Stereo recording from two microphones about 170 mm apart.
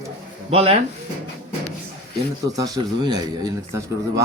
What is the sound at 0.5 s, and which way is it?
Speech, 35° right (ahead or behind).